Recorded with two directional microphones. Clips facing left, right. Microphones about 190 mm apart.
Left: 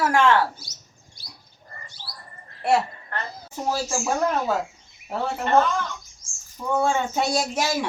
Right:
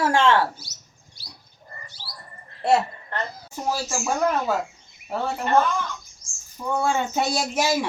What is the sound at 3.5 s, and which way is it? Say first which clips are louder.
Speech: left 1 dB; centre (ahead or behind).